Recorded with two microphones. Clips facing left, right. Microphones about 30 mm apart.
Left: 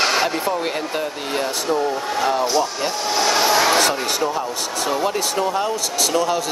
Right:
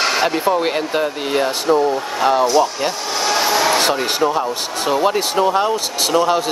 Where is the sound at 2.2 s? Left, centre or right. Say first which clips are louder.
Right 5 dB; right.